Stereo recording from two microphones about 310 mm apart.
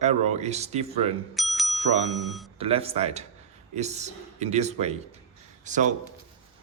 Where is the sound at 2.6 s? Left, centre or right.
Centre.